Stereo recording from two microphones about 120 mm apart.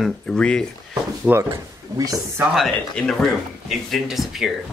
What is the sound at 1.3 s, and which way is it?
Speech, 20° right (ahead or behind).